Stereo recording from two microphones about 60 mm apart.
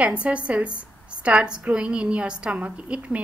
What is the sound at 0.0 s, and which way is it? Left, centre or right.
A woman's voice, right.